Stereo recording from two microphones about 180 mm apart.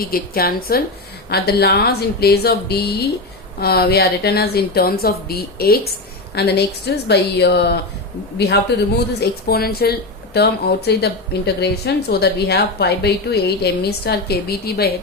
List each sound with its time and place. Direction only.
0.0 s speech: 60° left (ahead or behind)